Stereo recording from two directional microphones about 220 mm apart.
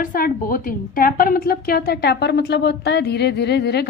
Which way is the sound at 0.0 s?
40° left (ahead or behind).